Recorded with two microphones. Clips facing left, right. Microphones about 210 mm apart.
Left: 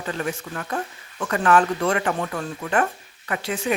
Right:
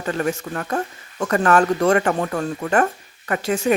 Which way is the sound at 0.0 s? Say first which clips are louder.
Right 5 dB; 45° right (ahead or behind).